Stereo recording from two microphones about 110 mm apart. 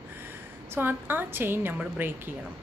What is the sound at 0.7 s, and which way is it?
Speech, 20° right (ahead or behind).